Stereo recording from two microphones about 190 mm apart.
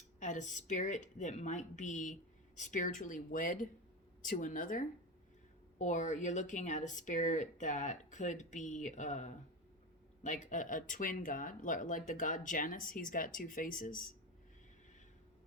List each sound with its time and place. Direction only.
0.2 s speech: 40° left (ahead or behind)